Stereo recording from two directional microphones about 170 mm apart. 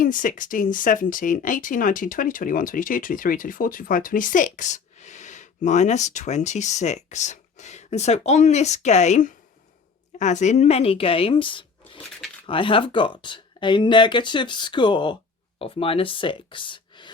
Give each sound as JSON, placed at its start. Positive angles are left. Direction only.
{"t": 0.0, "sound": "a woman's voice", "side_deg": 50}